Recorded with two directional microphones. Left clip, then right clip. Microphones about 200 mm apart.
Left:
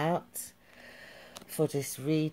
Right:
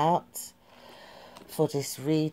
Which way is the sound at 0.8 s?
10° left (ahead or behind).